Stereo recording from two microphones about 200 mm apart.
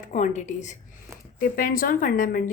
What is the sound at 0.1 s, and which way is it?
A woman's voice, 40° left (ahead or behind).